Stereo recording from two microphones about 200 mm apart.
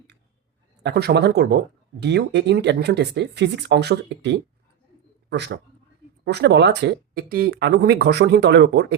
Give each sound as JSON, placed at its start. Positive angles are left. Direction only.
{"t": 0.8, "sound": "speech", "side_deg": -55}